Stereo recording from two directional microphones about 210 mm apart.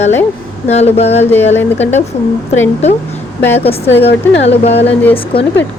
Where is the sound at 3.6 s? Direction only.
30° left (ahead or behind).